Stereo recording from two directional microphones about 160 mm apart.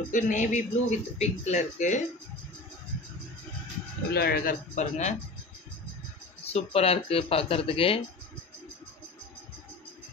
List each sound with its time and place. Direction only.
0.1 s speech: 50° left (ahead or behind)
4.1 s speech: 75° left (ahead or behind); by 5.1 s 45° left (ahead or behind)
6.4 s speech: 40° left (ahead or behind)